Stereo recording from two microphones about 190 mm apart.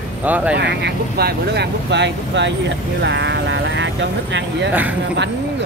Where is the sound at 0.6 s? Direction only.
65° right (ahead or behind).